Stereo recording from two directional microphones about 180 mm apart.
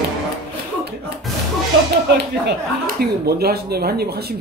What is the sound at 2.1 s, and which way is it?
Speech, 65° right (ahead or behind).